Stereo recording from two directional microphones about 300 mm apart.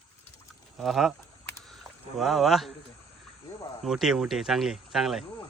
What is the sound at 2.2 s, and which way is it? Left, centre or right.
Speech, centre.